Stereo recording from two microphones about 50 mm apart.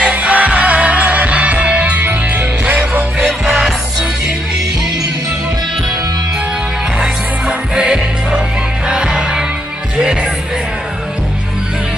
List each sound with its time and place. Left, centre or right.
0.0 s music: right
3.3 s music: centre
7.0 s music: centre